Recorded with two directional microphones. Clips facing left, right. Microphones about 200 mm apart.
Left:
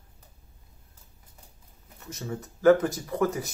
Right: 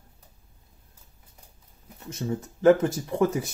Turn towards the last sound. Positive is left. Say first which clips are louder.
# right 2 dB
turn(degrees=-25)  # may be behind; listen again after turning